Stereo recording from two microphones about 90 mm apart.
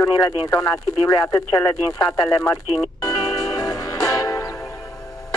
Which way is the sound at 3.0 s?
40° left (ahead or behind).